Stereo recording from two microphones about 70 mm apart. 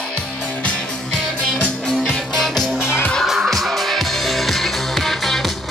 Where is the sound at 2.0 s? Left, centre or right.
Centre.